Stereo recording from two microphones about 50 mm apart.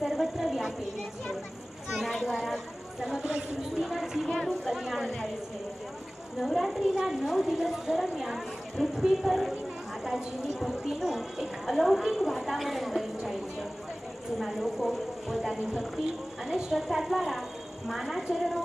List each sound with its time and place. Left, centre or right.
0.0 s a sound: centre
1.9 s a sound: centre
3.2 s speech: right
3.8 s speech: centre
5.0 s speech: centre
6.4 s speech: centre